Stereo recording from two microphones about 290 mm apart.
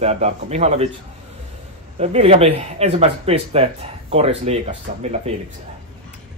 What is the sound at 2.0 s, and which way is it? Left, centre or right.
Speech, centre.